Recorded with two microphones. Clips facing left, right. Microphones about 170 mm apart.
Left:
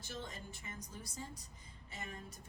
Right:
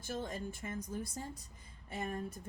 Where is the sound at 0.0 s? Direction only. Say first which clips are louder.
Right 7 dB; 50° right (ahead or behind).